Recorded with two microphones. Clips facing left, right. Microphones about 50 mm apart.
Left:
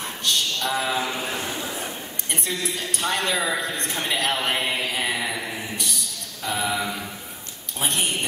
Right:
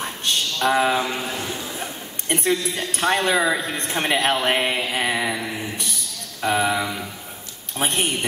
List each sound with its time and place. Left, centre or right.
0.2 s speech: right
2.2 s a man's voice: right
6.4 s a man's voice: right